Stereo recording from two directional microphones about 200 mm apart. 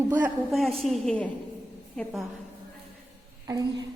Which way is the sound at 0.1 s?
5° right (ahead or behind).